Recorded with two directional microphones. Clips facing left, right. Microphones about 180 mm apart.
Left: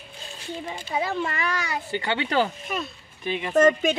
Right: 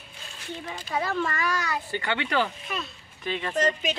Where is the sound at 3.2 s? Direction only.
15° left (ahead or behind).